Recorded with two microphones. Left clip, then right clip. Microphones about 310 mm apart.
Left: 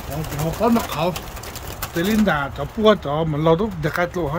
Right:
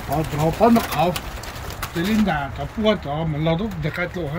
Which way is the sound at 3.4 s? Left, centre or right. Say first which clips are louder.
Left 7 dB; centre.